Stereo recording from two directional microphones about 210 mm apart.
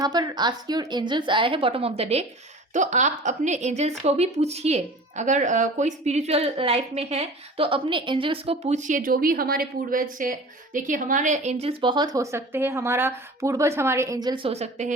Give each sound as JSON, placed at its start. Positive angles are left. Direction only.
{"t": 0.0, "sound": "a woman's voice", "side_deg": -20}